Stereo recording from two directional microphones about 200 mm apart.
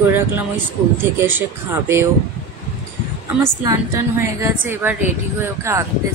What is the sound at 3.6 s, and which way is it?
A woman's voice, 15° right (ahead or behind).